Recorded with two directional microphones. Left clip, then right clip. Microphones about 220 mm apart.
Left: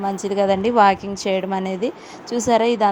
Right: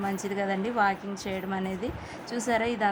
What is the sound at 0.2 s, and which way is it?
A woman's voice, 20° left (ahead or behind).